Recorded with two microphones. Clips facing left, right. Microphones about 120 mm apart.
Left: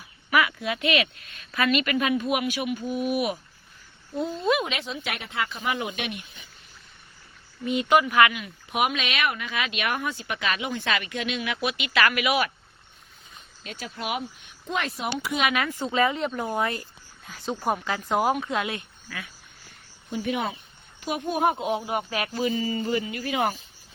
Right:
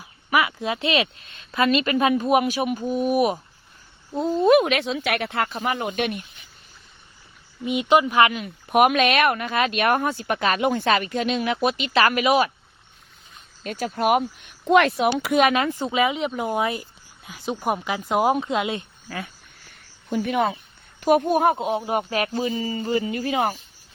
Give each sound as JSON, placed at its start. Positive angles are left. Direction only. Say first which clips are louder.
{"t": 0.3, "sound": "a woman's voice", "louder": "right 2 dB", "side_deg": -25}
{"t": 7.6, "sound": "speech", "louder": "right 2 dB", "side_deg": -20}
{"t": 8.7, "sound": "a woman's voice", "louder": "right 9 dB", "side_deg": -50}
{"t": 13.7, "sound": "a woman's voice", "louder": "right 11 dB", "side_deg": -50}
{"t": 14.7, "sound": "speech", "louder": "right 11 dB", "side_deg": -75}
{"t": 15.5, "sound": "speech", "louder": "right 3 dB", "side_deg": -25}
{"t": 19.0, "sound": "speech", "louder": "right 6 dB", "side_deg": -40}
{"t": 20.1, "sound": "a woman's voice", "louder": "right 6 dB", "side_deg": -55}
{"t": 21.6, "sound": "speech", "louder": "right 3 dB", "side_deg": -30}